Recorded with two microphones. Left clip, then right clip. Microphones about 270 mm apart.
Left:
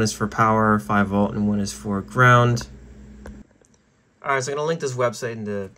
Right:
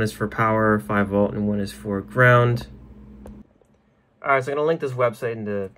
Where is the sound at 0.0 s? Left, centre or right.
Centre.